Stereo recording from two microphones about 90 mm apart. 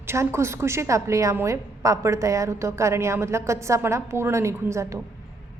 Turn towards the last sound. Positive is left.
turn(degrees=-30)  # may be behind; listen again after turning